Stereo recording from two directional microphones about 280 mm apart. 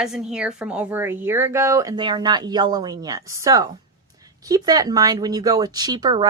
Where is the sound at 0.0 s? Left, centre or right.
Centre.